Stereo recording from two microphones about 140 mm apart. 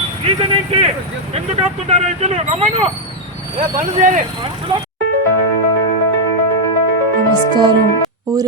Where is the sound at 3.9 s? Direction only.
65° right (ahead or behind).